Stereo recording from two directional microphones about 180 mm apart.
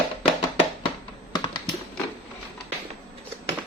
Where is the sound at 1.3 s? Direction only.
25° left (ahead or behind).